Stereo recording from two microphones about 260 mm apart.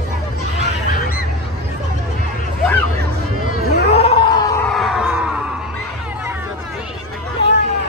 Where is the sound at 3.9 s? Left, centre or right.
Left.